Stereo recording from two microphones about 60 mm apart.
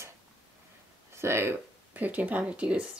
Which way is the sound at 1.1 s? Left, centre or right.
Right.